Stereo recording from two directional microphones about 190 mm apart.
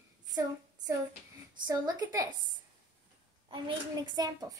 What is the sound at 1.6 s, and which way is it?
Speech, 20° right (ahead or behind).